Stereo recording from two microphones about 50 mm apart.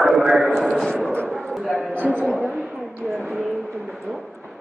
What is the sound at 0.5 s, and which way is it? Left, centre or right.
A man's voice, centre.